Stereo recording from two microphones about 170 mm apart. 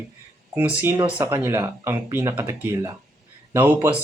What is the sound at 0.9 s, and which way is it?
Speech, 30° right (ahead or behind).